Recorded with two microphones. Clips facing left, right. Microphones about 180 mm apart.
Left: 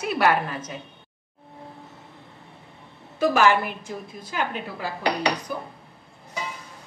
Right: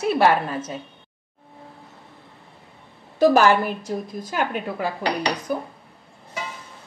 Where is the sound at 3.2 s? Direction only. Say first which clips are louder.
Right 4 dB; 35° right (ahead or behind).